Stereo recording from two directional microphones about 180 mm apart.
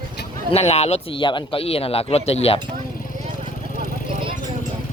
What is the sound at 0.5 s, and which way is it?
Speech, 35° left (ahead or behind).